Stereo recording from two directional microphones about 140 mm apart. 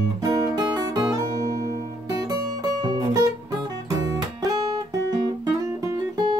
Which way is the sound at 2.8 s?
30° right (ahead or behind).